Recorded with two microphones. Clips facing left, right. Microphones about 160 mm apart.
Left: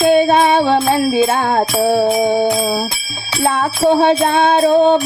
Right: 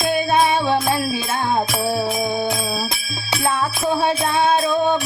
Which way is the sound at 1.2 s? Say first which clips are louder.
Left 6 dB; 65° left (ahead or behind).